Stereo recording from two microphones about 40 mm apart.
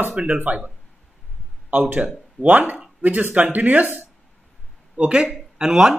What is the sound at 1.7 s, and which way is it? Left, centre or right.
Speech, right.